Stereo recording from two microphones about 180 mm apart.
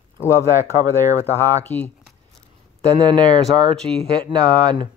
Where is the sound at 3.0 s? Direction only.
25° right (ahead or behind).